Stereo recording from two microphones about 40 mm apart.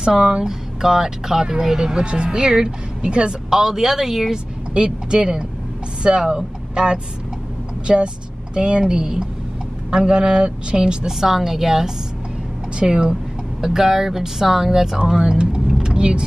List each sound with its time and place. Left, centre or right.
0.0 s speech: right
0.5 s speech: centre
3.4 s speech: centre
4.7 s speech: right
15.8 s vehicle: right